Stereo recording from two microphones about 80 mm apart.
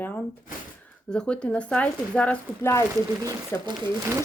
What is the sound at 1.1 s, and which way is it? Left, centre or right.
Speech, centre.